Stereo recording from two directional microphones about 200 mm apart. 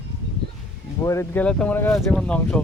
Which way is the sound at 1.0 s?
15° left (ahead or behind).